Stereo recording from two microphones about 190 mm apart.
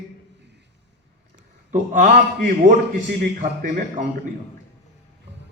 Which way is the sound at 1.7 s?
40° right (ahead or behind).